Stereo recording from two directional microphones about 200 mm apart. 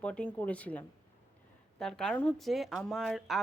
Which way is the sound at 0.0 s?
5° left (ahead or behind).